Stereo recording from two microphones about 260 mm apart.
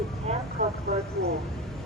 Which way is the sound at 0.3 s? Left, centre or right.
Right.